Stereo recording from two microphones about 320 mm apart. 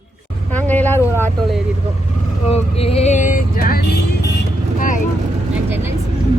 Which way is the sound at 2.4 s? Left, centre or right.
Centre.